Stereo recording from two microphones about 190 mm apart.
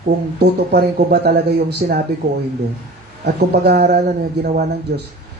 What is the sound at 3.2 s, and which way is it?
A man's voice, 60° right (ahead or behind).